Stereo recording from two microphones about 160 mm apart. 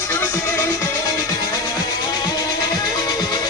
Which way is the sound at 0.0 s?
15° left (ahead or behind).